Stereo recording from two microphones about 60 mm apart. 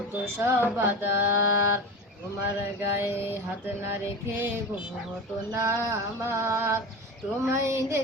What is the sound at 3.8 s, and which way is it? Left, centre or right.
Speech, right.